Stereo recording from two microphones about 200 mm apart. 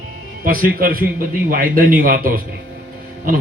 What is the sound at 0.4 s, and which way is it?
A man's voice, 45° right (ahead or behind).